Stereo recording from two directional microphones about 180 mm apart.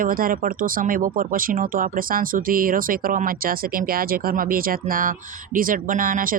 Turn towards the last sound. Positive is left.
turn(degrees=-50)  # may be behind; listen again after turning